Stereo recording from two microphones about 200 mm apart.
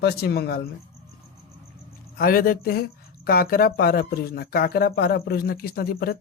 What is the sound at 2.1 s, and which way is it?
Speech, 45° left (ahead or behind).